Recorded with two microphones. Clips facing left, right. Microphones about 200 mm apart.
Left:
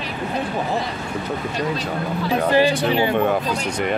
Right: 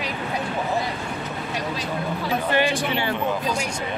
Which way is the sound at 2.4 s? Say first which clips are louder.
Left 6 dB; 35° left (ahead or behind).